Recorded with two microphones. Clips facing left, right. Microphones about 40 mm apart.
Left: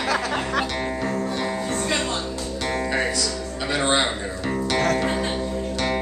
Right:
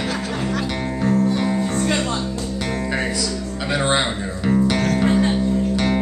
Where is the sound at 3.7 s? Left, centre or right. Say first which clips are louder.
Right 1 dB; centre.